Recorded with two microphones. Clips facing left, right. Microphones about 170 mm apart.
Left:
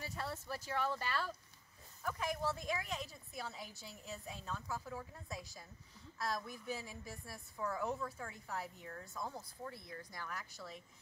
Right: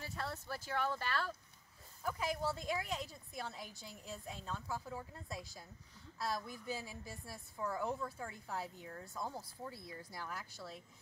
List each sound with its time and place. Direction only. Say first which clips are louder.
0.7 s a woman's voice: even; centre (ahead or behind)